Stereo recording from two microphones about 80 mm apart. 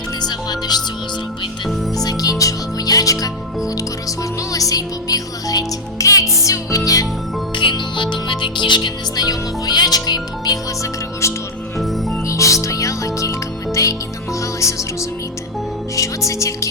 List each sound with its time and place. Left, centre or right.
0.2 s music: left
2.0 s music: left
7.5 s music: left
11.2 s music: left
11.8 s music: centre
12.3 s music: left
14.6 s music: left
16.0 s music: left